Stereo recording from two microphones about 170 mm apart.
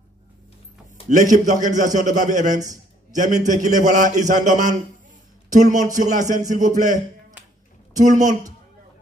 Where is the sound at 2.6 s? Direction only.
20° right (ahead or behind).